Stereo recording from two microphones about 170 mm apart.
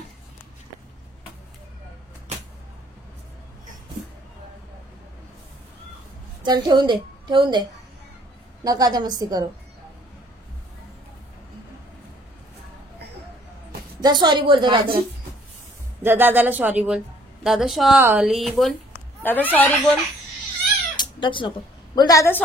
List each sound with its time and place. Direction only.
6.4 s a woman's voice: 25° right (ahead or behind)
8.6 s a woman's voice: 20° right (ahead or behind)
14.0 s a woman's voice: 25° right (ahead or behind)
16.0 s a woman's voice: 10° right (ahead or behind); by 20.0 s 10° left (ahead or behind)
20.9 s speech: 25° left (ahead or behind)